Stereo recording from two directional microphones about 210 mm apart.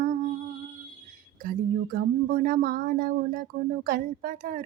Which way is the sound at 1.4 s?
40° right (ahead or behind).